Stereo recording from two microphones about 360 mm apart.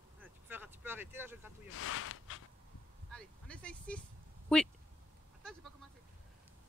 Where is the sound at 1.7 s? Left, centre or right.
Left.